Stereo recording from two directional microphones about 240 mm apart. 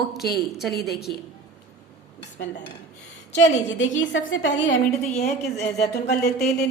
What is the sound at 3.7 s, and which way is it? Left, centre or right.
Speech, left.